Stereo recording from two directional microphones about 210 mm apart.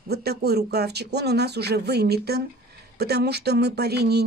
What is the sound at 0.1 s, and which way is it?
Speech, 50° right (ahead or behind).